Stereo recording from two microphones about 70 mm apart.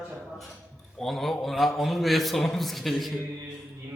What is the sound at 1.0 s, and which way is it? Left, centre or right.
A man's voice, centre.